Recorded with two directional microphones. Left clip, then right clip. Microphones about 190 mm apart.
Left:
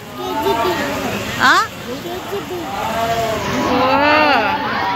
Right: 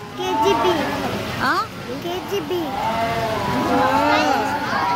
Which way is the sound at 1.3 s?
5° left (ahead or behind).